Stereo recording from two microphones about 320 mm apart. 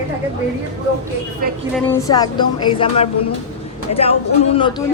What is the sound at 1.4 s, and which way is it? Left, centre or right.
Speech, right.